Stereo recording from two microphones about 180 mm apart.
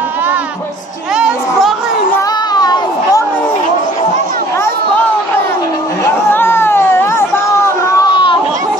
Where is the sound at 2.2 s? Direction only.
25° left (ahead or behind).